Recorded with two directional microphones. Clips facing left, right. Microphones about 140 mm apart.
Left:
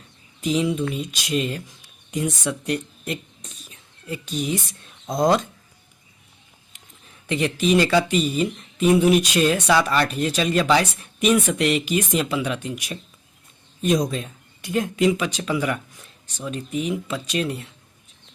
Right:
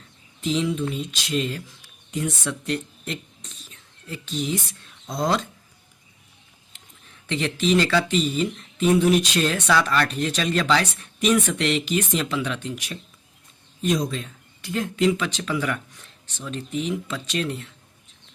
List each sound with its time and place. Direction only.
0.4 s speech: 10° left (ahead or behind)
7.3 s speech: 10° left (ahead or behind)